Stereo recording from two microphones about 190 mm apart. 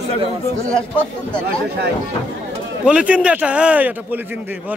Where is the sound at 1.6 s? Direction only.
60° right (ahead or behind).